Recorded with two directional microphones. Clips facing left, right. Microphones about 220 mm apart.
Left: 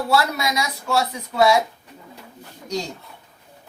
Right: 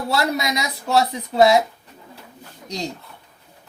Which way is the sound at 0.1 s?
20° right (ahead or behind).